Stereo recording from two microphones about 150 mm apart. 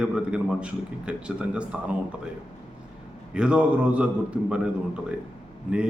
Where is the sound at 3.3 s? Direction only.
5° right (ahead or behind).